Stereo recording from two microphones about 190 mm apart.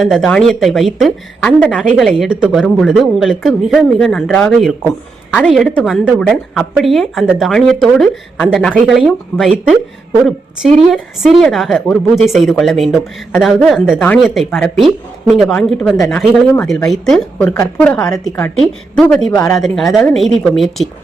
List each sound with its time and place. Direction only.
0.0 s a woman's voice: centre (ahead or behind)
10.9 s a woman's voice: centre (ahead or behind)
19.3 s speech: 20° left (ahead or behind)
19.5 s a woman's voice: centre (ahead or behind)